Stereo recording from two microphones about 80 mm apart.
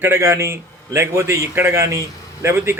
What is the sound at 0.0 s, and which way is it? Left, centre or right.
A man's voice, right.